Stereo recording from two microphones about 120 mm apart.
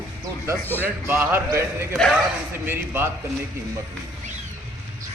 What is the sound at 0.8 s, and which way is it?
A man's voice, 15° right (ahead or behind).